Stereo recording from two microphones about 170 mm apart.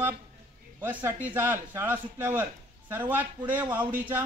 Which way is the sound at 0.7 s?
10° right (ahead or behind).